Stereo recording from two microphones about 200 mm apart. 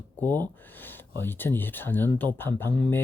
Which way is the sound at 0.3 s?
10° left (ahead or behind).